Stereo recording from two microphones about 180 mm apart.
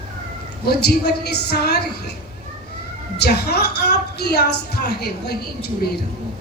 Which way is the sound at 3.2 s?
65° left (ahead or behind).